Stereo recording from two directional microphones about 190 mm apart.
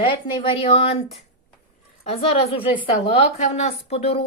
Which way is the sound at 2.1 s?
30° left (ahead or behind).